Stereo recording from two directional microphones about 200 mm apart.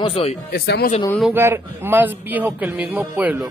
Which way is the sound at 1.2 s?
10° right (ahead or behind).